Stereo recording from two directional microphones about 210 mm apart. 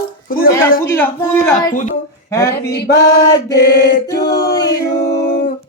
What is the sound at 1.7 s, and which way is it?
Speech, 35° left (ahead or behind).